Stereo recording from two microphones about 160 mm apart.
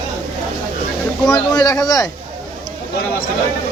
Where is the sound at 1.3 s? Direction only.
25° left (ahead or behind).